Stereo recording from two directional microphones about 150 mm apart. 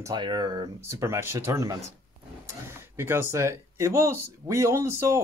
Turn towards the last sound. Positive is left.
turn(degrees=-20)  # may be behind; listen again after turning